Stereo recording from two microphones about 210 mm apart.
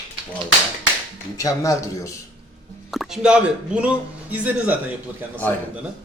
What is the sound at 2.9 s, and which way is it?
A man's voice, centre (ahead or behind).